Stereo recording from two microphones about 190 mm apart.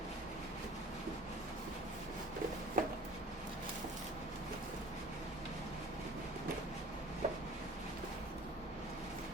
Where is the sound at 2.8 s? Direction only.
45° right (ahead or behind).